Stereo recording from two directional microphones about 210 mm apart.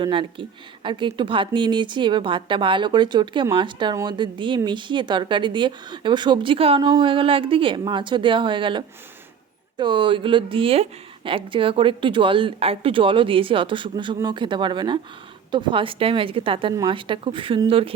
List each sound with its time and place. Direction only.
0.0 s speech: 25° right (ahead or behind)